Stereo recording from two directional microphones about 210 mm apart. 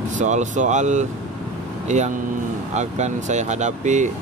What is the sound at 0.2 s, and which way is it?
Speech, 35° right (ahead or behind).